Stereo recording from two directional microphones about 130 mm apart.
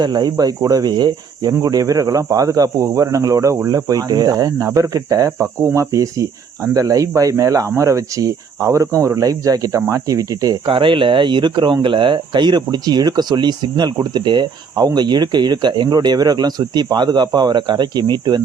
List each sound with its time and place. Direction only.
0.0 s speech: 35° right (ahead or behind)
10.7 s speech: 40° right (ahead or behind)